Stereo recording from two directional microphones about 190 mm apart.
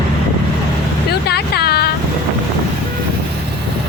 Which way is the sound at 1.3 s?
55° left (ahead or behind).